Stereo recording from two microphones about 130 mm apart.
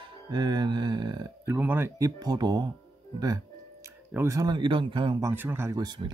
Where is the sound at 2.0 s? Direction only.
30° right (ahead or behind).